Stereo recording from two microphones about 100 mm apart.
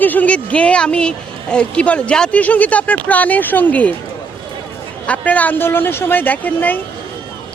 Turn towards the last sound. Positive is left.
turn(degrees=15)  # may be behind; listen again after turning